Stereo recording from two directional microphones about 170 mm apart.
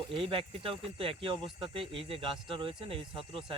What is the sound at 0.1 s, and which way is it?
Speech, 30° right (ahead or behind).